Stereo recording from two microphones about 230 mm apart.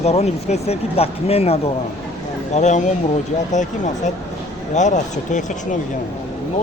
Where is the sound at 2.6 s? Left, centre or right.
Left.